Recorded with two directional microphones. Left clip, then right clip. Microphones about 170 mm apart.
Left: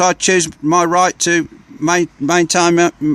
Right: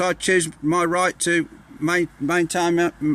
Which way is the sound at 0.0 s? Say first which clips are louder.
Left 7 dB; 40° left (ahead or behind).